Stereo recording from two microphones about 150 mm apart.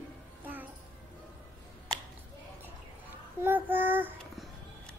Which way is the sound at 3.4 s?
15° right (ahead or behind).